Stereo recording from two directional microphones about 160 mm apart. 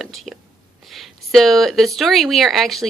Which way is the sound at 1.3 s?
Centre (ahead or behind).